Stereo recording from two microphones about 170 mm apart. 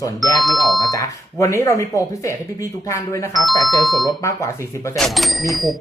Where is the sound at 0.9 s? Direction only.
20° left (ahead or behind).